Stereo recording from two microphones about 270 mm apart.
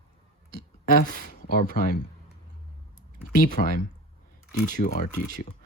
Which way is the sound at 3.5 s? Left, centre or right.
Left.